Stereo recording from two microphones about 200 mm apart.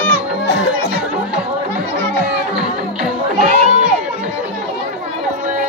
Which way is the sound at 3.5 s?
35° right (ahead or behind).